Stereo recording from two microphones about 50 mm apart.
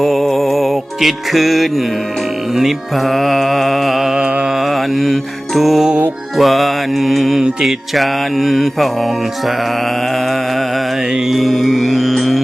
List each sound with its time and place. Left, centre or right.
0.0 s music: centre
2.6 s mantra: centre
4.2 s music: right
4.5 s music: centre
11.3 s music: centre